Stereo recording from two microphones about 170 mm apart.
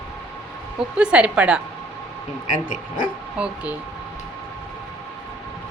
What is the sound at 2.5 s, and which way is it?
Speech, 50° left (ahead or behind).